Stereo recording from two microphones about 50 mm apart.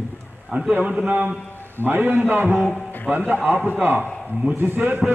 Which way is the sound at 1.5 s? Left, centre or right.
Left.